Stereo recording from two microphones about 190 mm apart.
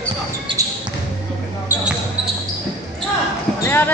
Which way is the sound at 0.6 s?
15° right (ahead or behind).